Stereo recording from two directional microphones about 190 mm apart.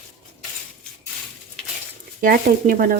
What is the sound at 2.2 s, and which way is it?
Speech, 50° right (ahead or behind).